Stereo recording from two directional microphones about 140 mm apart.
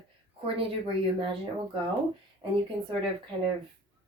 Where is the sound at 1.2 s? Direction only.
40° right (ahead or behind).